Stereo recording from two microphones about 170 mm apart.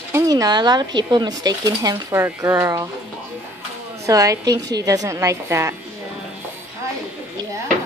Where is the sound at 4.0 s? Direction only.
20° right (ahead or behind).